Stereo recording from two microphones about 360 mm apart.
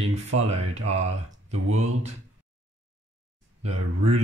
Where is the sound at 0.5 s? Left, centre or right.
Centre.